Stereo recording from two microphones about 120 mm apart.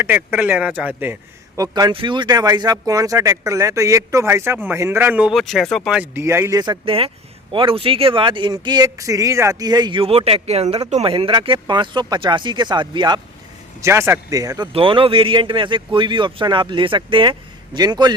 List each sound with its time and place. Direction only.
0.0 s speech: 15° right (ahead or behind)
1.5 s speech: 30° right (ahead or behind)
1.9 s speech: 45° right (ahead or behind); by 5.3 s 15° right (ahead or behind)
5.3 s speech: centre (ahead or behind)
6.0 s speech: 20° right (ahead or behind)
6.6 s speech: 40° right (ahead or behind)
10.1 s speech: 55° right (ahead or behind)
11.0 s speech: 50° right (ahead or behind)
13.8 s speech: 20° right (ahead or behind)
14.7 s speech: 50° right (ahead or behind)